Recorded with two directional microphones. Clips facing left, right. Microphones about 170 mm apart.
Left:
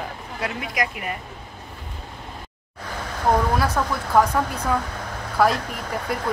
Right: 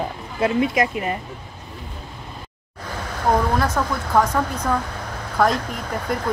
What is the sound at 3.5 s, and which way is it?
Speech, 10° left (ahead or behind).